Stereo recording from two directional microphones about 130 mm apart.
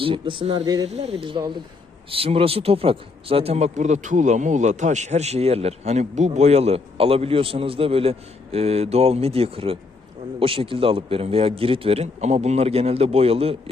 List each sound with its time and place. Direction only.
0.0 s speech: 40° right (ahead or behind)
0.6 s speech: 30° right (ahead or behind)
0.9 s speech: 50° right (ahead or behind); by 1.6 s 35° right (ahead or behind)
2.0 s speech: 45° right (ahead or behind)